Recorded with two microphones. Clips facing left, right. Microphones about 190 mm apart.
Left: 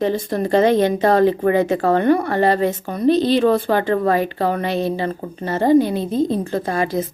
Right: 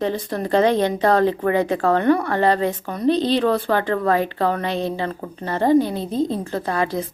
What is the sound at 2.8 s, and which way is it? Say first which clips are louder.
Speech: left 3 dB; 25° left (ahead or behind).